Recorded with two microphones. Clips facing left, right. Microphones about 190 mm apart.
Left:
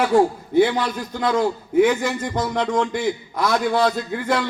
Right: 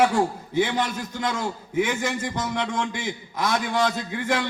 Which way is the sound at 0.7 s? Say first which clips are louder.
Left 2 dB; 55° left (ahead or behind).